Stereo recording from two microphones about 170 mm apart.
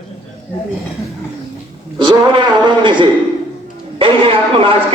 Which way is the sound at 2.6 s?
30° right (ahead or behind).